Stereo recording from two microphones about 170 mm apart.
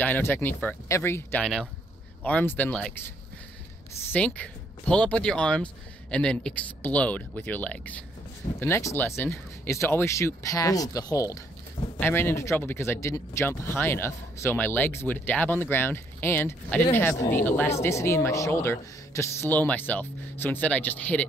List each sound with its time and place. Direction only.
0.0 s speech: 10° left (ahead or behind)
4.1 s speech: 10° left (ahead or behind)